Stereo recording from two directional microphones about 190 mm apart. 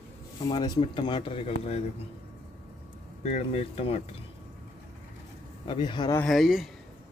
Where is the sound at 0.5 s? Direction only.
25° left (ahead or behind).